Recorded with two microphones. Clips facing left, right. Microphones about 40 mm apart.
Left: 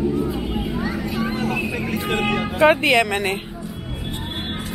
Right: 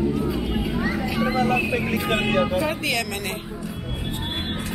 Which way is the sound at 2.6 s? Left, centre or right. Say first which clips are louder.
Left 11 dB; left.